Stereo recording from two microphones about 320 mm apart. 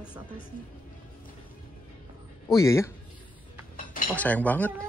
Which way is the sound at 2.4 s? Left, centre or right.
Centre.